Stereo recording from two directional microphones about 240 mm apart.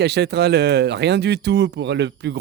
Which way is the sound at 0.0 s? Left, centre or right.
Right.